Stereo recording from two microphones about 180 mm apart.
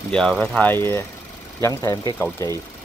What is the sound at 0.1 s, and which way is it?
Speech, 5° left (ahead or behind).